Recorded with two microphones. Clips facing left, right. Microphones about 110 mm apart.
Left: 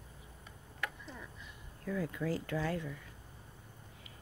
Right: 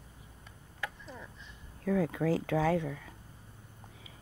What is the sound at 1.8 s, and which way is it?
Speech, 90° right.